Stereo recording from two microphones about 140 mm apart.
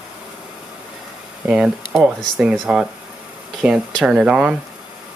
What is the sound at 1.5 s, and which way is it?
Speech, 5° right (ahead or behind).